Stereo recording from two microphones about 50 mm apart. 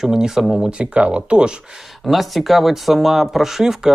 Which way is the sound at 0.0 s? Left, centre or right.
Centre.